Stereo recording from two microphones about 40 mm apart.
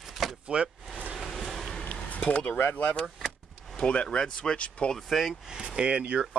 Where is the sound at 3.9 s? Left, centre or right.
Left.